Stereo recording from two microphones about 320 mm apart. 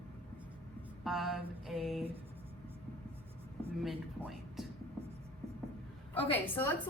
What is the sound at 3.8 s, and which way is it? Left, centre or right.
Speech, centre.